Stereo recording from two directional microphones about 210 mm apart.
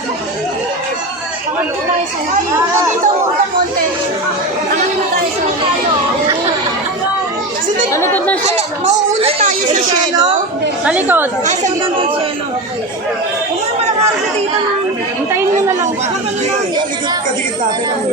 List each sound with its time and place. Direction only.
7.9 s chatter: 10° left (ahead or behind)
8.4 s speech: 30° right (ahead or behind)
10.8 s speech: 10° right (ahead or behind)
11.4 s speech: 30° right (ahead or behind)